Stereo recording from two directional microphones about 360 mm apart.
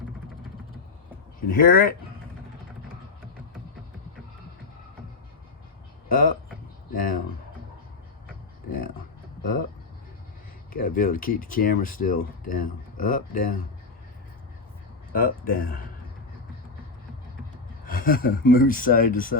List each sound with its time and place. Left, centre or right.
1.5 s speech: left
6.1 s speech: left
10.7 s speech: left
15.1 s speech: left
17.8 s speech: left